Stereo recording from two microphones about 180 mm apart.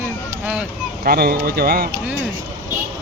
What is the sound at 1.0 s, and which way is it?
Speech, 55° right (ahead or behind).